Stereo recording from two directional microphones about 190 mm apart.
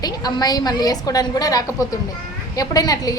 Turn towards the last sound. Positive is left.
turn(degrees=20)  # may be behind; listen again after turning